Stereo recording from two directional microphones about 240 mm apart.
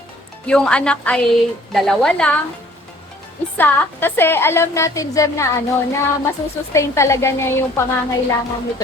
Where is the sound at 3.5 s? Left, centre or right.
Centre.